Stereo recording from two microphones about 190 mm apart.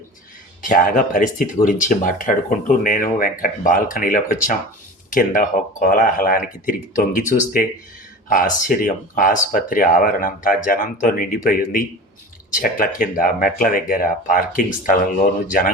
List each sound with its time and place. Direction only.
0.6 s speech: 45° left (ahead or behind)